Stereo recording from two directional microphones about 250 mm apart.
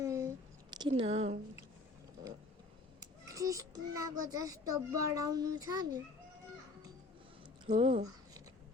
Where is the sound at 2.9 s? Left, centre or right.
Centre.